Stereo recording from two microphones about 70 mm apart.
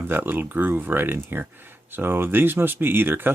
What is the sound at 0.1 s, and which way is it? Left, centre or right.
Speech, right.